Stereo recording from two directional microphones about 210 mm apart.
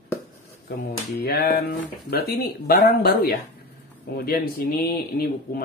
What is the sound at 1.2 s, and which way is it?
Speech, 50° left (ahead or behind).